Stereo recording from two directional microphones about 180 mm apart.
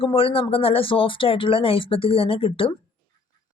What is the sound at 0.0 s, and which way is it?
Speech, 30° left (ahead or behind).